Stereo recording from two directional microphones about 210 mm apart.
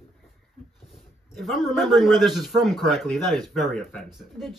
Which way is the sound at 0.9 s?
Centre (ahead or behind).